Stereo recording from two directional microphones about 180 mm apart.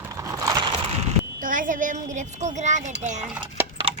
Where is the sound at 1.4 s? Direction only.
50° right (ahead or behind).